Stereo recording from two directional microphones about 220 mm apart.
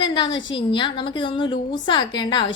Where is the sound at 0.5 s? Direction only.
20° left (ahead or behind).